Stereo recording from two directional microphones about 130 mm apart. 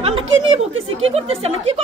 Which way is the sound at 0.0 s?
45° right (ahead or behind).